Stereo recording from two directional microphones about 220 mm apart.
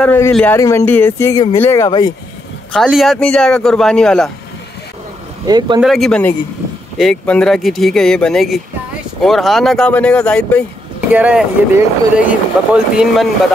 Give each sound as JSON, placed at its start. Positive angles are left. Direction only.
{"t": 0.0, "sound": "speech", "side_deg": 10}
{"t": 2.7, "sound": "speech", "side_deg": 0}
{"t": 5.5, "sound": "speech", "side_deg": -20}
{"t": 5.8, "sound": "speech", "side_deg": 0}
{"t": 11.1, "sound": "speech", "side_deg": -5}